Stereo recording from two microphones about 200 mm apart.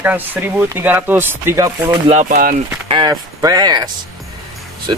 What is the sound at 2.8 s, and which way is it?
Speech, 25° right (ahead or behind).